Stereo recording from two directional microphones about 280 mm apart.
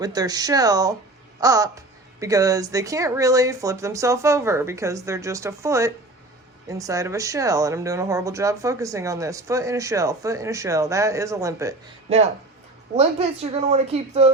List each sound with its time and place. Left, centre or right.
0.0 s speech: centre
13.0 s speech: right